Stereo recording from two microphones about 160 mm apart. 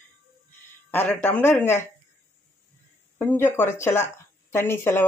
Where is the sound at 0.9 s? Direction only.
10° left (ahead or behind).